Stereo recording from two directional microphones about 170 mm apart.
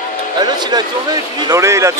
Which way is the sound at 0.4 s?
25° right (ahead or behind).